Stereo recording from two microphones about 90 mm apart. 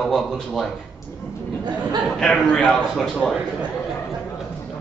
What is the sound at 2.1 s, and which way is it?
A man's voice, 5° left (ahead or behind).